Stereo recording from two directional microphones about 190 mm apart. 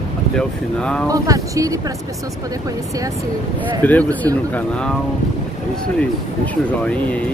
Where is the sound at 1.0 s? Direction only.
20° right (ahead or behind).